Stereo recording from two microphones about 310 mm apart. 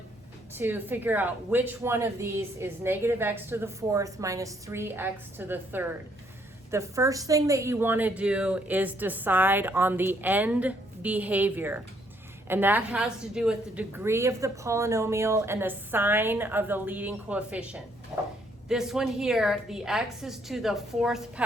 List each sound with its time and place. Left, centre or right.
0.5 s a woman's voice: centre